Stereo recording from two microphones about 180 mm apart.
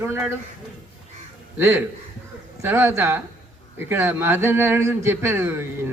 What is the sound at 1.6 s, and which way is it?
Speech, 10° right (ahead or behind).